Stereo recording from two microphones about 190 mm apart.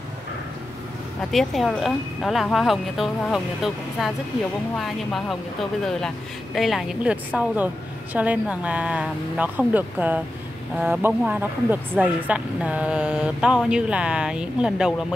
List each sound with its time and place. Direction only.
1.3 s speech: centre (ahead or behind)